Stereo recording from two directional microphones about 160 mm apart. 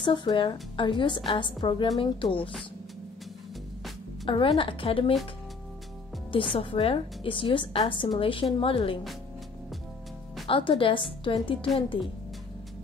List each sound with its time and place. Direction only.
0.0 s a woman's voice: 30° left (ahead or behind)
4.3 s a woman's voice: 35° left (ahead or behind)
6.3 s a woman's voice: 35° left (ahead or behind)
10.4 s a woman's voice: 35° left (ahead or behind)